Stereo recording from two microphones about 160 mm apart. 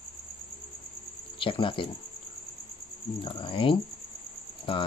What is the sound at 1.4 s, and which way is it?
Speech, 30° left (ahead or behind).